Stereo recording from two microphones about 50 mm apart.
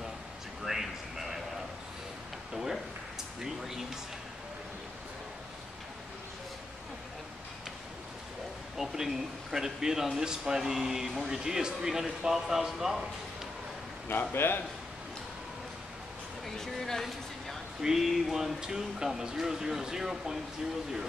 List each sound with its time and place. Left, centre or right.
0.7 s a sound: centre
2.5 s speech: centre
8.7 s speech: centre
14.3 s a man's voice: left
16.4 s speech: centre
17.8 s speech: centre